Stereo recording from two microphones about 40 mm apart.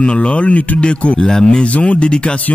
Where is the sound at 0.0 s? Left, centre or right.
Left.